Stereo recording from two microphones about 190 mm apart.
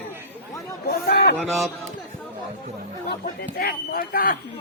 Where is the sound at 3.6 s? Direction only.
50° left (ahead or behind).